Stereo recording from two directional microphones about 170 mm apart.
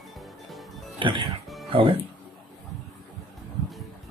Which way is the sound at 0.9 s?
25° right (ahead or behind).